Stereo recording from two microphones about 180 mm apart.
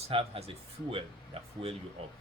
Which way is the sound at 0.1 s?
30° right (ahead or behind).